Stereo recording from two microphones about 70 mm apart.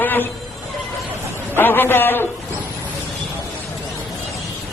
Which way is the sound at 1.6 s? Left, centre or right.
Left.